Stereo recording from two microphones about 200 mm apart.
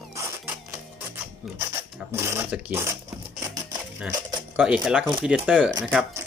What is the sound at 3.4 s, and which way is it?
Music, 15° right (ahead or behind).